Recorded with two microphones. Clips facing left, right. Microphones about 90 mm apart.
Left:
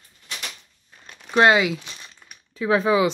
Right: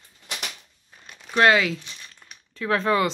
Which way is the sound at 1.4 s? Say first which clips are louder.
Left 2 dB; 20° left (ahead or behind).